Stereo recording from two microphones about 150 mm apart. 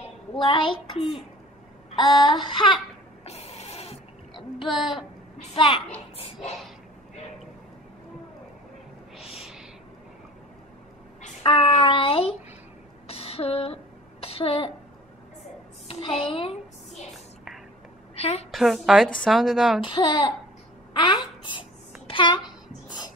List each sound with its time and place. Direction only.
0.4 s a child's voice: 35° left (ahead or behind)
2.0 s a child's voice: 30° left (ahead or behind)
3.3 s printer: 45° left (ahead or behind)
4.6 s speech: centre (ahead or behind)
5.5 s a child's voice: 35° left (ahead or behind)
11.4 s a child's voice: 40° left (ahead or behind)
13.1 s a sound: 40° left (ahead or behind)
15.9 s a child's voice: 35° left (ahead or behind)
18.1 s a sound: 45° left (ahead or behind)
18.5 s speech: centre (ahead or behind)
19.8 s a child's voice: 35° left (ahead or behind)
22.0 s a sound: 35° left (ahead or behind)
22.8 s music: 30° left (ahead or behind)